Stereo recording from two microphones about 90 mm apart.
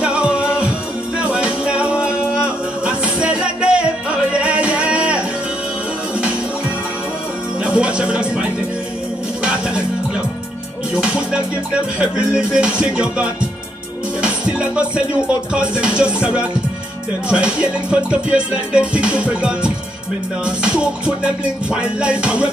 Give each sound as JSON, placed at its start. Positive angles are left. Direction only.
{"t": 0.0, "sound": "music", "side_deg": -10}
{"t": 7.6, "sound": "music", "side_deg": -10}
{"t": 10.9, "sound": "music", "side_deg": -10}